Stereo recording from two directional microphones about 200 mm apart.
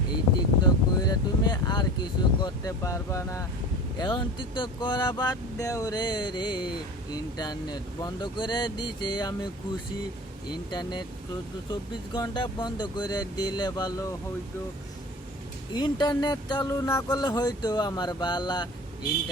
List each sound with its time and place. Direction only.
0.6 s a sound: 20° left (ahead or behind)
3.9 s speech: 20° left (ahead or behind)
10.7 s speech: 20° left (ahead or behind)
12.1 s speech: 20° left (ahead or behind)
15.7 s speech: 20° left (ahead or behind)